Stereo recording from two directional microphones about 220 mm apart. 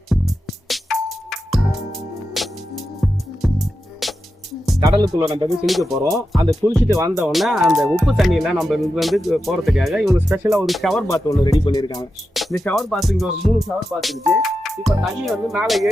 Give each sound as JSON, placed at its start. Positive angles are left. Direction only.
{"t": 0.1, "sound": "music", "side_deg": 0}
{"t": 4.8, "sound": "speech", "side_deg": -20}
{"t": 5.6, "sound": "music", "side_deg": 0}
{"t": 6.4, "sound": "speech", "side_deg": -15}
{"t": 7.1, "sound": "music", "side_deg": 0}
{"t": 10.2, "sound": "speech", "side_deg": -10}
{"t": 10.5, "sound": "music", "side_deg": 0}
{"t": 11.1, "sound": "speech", "side_deg": 15}
{"t": 12.3, "sound": "music", "side_deg": 0}